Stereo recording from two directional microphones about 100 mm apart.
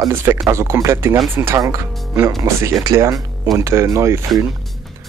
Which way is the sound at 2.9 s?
40° right (ahead or behind).